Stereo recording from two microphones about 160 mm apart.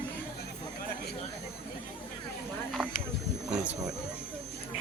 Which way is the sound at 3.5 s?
10° right (ahead or behind).